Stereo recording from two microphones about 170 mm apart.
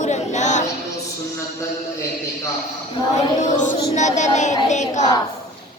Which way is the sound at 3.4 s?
45° left (ahead or behind).